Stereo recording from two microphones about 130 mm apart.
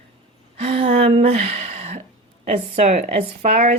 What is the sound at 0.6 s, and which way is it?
A woman's voice, 50° right (ahead or behind).